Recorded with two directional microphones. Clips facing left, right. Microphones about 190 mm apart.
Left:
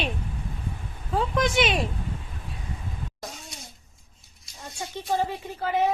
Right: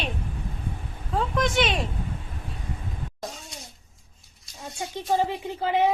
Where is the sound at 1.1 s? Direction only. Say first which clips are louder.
Left 1 dB; 5° left (ahead or behind).